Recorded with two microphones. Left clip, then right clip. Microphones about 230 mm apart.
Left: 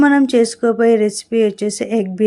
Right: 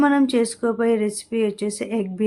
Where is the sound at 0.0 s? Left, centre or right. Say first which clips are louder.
Left 6 dB; centre.